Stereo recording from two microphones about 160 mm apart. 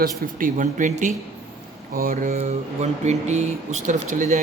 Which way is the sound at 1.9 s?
65° right (ahead or behind).